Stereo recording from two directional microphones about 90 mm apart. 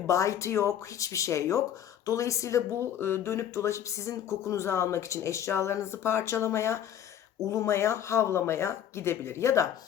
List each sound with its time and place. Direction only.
0.1 s speech: 35° left (ahead or behind)